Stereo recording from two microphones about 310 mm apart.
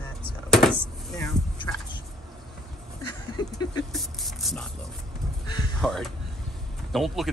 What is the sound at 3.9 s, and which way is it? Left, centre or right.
Speech, centre.